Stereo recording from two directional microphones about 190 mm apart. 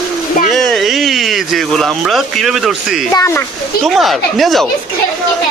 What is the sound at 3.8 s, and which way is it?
Speech, centre (ahead or behind).